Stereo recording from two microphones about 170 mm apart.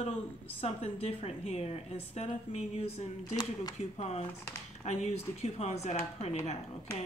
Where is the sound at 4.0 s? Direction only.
35° left (ahead or behind).